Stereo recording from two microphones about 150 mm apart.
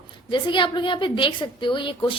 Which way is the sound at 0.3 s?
30° left (ahead or behind).